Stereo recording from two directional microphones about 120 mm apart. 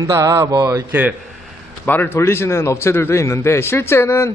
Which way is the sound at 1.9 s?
15° left (ahead or behind).